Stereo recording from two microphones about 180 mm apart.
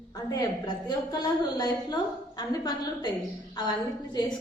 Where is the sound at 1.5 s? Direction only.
20° left (ahead or behind).